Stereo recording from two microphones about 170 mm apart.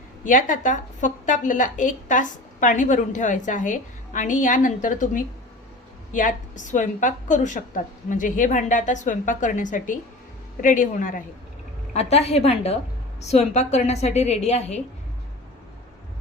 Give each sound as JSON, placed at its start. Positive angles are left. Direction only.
{"t": 0.3, "sound": "a woman's voice", "side_deg": 50}
{"t": 11.9, "sound": "a woman's voice", "side_deg": 40}